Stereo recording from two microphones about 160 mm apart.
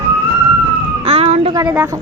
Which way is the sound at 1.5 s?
15° right (ahead or behind).